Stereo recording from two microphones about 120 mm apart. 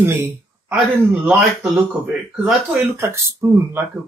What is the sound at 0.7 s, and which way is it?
A man's voice, 10° right (ahead or behind).